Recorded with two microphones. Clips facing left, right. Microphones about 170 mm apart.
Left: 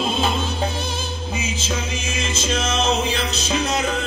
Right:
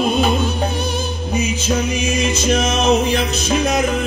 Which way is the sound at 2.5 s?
60° right (ahead or behind).